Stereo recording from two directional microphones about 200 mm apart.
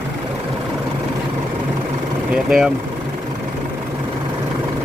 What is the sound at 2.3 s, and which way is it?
Speech, 5° right (ahead or behind).